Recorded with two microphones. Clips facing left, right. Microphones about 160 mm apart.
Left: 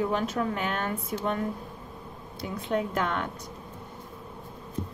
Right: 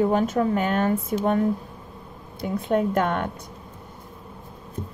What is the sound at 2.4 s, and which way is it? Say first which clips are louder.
Speech: right 6 dB; 50° right (ahead or behind).